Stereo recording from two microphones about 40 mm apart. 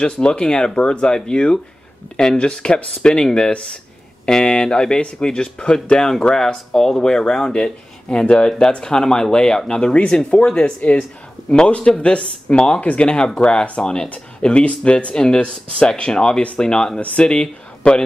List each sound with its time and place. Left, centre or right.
0.0 s speech: left
4.3 s speech: centre
6.3 s speech: centre
17.0 s speech: left
17.3 s speech: left